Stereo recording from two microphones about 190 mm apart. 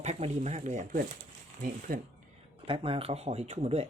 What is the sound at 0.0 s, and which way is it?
Speech, 35° right (ahead or behind).